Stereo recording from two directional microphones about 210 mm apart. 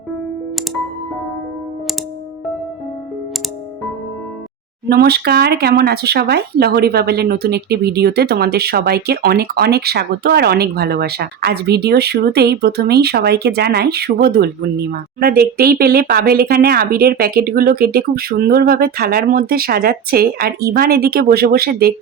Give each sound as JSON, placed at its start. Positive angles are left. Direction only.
{"t": 4.9, "sound": "speech", "side_deg": -50}